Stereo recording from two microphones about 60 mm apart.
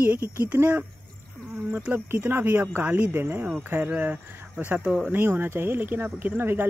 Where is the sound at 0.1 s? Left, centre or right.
Right.